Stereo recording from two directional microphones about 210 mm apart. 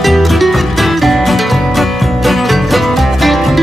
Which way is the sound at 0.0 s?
Centre (ahead or behind).